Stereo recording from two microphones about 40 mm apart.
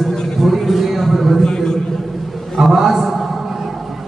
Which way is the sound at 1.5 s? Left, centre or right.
Centre.